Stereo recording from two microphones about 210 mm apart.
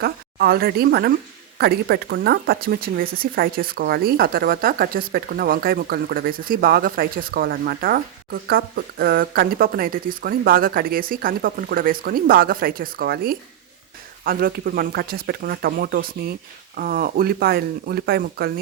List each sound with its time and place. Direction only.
0.0 s speech: 50° right (ahead or behind)